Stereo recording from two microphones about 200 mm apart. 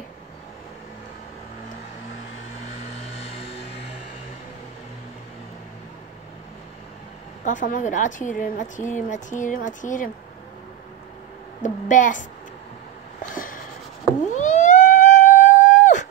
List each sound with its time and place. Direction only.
3.3 s music: 30° left (ahead or behind)
7.4 s speech: 40° left (ahead or behind)
11.6 s speech: 40° left (ahead or behind)
13.3 s writing: 45° left (ahead or behind)
14.2 s cat: 35° left (ahead or behind)